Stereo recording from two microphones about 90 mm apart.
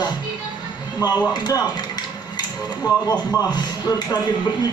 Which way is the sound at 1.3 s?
50° left (ahead or behind).